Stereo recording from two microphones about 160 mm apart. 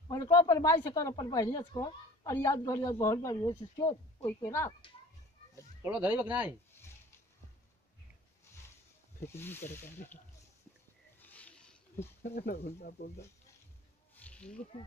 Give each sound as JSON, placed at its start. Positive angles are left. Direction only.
{"t": 0.1, "sound": "speech", "side_deg": 20}
{"t": 5.9, "sound": "speech", "side_deg": -10}
{"t": 9.2, "sound": "speech", "side_deg": 15}
{"t": 11.1, "sound": "a sound", "side_deg": 10}
{"t": 12.2, "sound": "speech", "side_deg": 90}
{"t": 14.1, "sound": "snake", "side_deg": 10}